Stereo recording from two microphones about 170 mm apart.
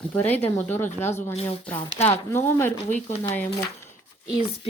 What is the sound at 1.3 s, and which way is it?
Speech, 35° left (ahead or behind).